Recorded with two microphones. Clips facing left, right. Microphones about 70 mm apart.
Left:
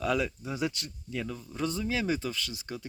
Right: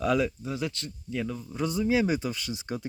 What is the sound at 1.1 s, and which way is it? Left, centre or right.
Speech, centre.